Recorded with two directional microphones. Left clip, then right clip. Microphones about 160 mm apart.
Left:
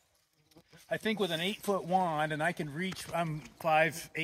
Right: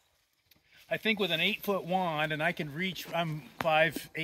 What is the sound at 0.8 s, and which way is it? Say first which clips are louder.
Speech: right 3 dB; 25° right (ahead or behind).